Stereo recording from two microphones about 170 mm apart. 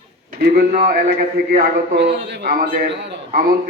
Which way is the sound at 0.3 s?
60° right (ahead or behind).